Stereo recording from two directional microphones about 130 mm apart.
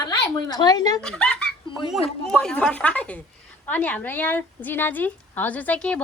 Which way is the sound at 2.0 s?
5° left (ahead or behind).